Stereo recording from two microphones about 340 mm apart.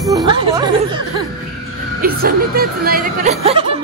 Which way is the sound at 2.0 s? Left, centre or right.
Right.